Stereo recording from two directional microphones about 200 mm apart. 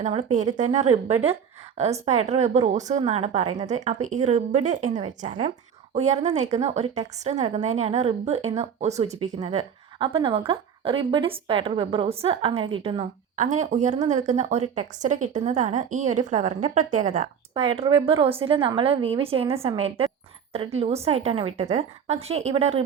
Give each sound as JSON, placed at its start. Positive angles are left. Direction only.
{"t": 0.0, "sound": "a woman's voice", "side_deg": -35}
{"t": 17.5, "sound": "a woman's voice", "side_deg": -25}